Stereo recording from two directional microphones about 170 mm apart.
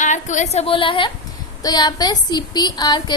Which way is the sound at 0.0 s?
45° left (ahead or behind).